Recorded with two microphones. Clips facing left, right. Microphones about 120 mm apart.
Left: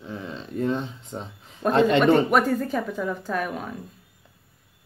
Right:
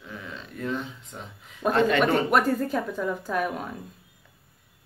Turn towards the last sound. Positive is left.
turn(degrees=0)  # may be behind; listen again after turning